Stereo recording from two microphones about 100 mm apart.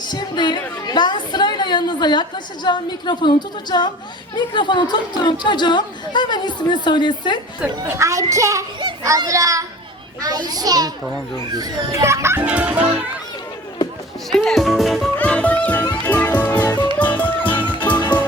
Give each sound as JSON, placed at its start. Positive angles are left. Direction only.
{"t": 0.0, "sound": "a woman's voice", "side_deg": 45}
{"t": 7.9, "sound": "a child's voice", "side_deg": -30}
{"t": 12.4, "sound": "fowl", "side_deg": -15}
{"t": 14.3, "sound": "speech", "side_deg": 5}
{"t": 15.2, "sound": "music", "side_deg": 15}
{"t": 17.6, "sound": "music", "side_deg": 55}